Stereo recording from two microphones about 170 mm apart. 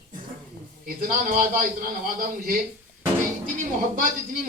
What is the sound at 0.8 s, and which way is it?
Speech, 55° right (ahead or behind).